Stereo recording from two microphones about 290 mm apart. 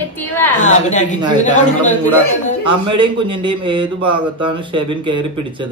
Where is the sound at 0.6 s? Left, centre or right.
Left.